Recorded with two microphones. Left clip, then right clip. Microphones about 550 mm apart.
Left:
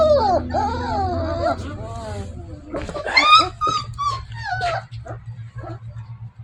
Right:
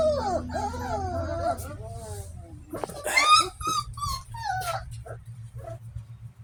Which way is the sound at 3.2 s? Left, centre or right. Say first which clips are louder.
Left 7 dB; right.